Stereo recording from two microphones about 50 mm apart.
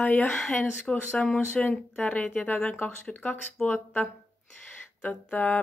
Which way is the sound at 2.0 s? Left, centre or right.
Left.